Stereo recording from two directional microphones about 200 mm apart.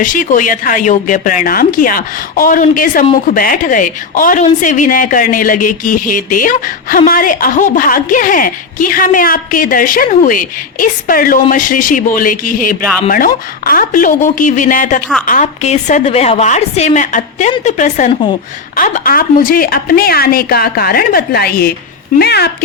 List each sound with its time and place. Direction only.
0.0 s a woman's voice: 40° left (ahead or behind)